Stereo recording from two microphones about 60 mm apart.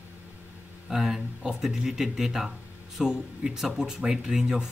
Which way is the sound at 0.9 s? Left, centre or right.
Centre.